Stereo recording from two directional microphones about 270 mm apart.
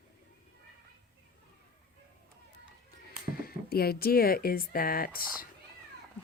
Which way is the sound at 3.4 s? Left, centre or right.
Left.